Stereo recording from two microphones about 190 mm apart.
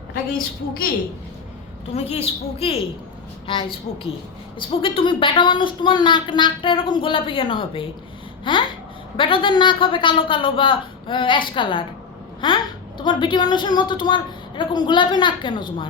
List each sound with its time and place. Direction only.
0.1 s a woman's voice: 50° left (ahead or behind)
1.9 s a woman's voice: 35° left (ahead or behind)
4.7 s a woman's voice: 25° left (ahead or behind)